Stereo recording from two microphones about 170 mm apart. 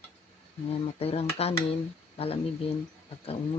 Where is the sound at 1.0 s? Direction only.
35° left (ahead or behind).